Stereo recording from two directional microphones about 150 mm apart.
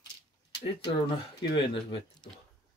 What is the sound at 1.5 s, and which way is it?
Speech, 40° left (ahead or behind).